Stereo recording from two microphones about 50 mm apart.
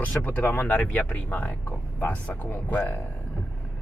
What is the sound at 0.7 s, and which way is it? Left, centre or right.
Speech, left.